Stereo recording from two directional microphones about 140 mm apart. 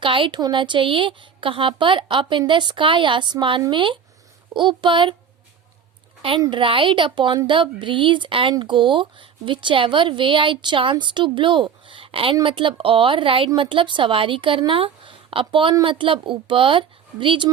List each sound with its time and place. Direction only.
0.0 s speech: 40° right (ahead or behind)
6.4 s speech: 35° right (ahead or behind)